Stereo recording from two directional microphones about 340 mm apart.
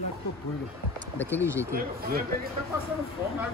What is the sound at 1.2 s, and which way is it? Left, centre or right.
Speech, centre.